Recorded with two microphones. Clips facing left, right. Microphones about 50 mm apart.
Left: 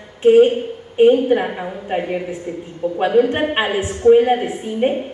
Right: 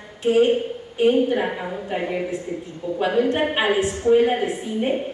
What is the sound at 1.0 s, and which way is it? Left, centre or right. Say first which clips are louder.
A woman's voice: left 6 dB; left.